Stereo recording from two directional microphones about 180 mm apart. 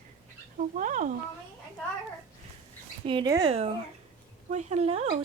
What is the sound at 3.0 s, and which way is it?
Speech, 25° right (ahead or behind).